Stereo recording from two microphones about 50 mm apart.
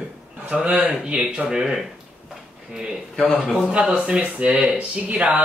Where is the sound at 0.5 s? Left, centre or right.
Centre.